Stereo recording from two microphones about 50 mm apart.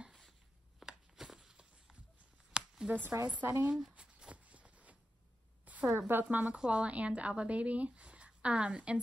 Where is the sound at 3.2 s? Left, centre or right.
Right.